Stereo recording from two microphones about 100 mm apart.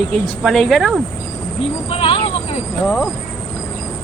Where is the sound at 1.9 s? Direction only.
70° left (ahead or behind).